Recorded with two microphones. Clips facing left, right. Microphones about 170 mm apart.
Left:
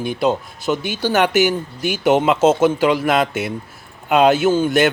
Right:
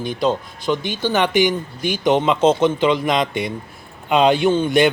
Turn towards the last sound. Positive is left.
turn(degrees=5)  # may be behind; listen again after turning